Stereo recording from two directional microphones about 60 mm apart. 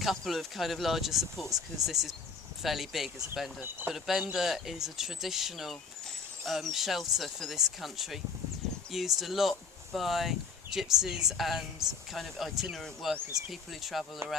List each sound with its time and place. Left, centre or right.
0.0 s speech: centre
3.6 s speech: right
3.9 s speech: centre
12.2 s speech: centre
14.2 s speech: right